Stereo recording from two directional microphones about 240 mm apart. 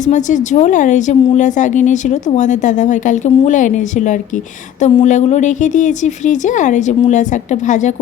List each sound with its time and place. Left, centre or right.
0.0 s speech: left